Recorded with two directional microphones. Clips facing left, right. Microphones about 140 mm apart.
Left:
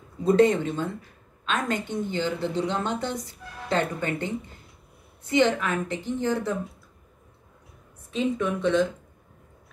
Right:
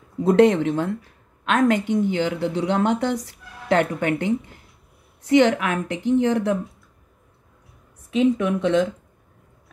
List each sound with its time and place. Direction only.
0.2 s a woman's voice: 80° right
8.1 s a woman's voice: 70° right (ahead or behind)